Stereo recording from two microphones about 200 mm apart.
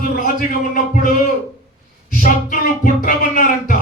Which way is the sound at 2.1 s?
45° left (ahead or behind).